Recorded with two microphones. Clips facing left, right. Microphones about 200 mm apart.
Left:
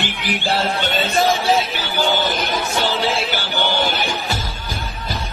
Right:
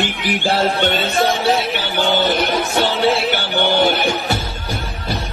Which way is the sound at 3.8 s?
65° right (ahead or behind).